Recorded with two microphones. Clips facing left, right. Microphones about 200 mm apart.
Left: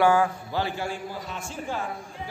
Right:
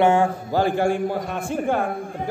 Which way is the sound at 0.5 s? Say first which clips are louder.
Right 9 dB; 50° right (ahead or behind).